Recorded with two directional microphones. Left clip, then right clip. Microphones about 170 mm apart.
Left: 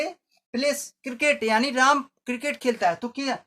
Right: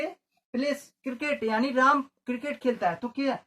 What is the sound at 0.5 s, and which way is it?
Speech, 30° left (ahead or behind).